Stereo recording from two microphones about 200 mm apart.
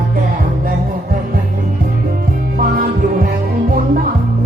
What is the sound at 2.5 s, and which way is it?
Music, 45° right (ahead or behind).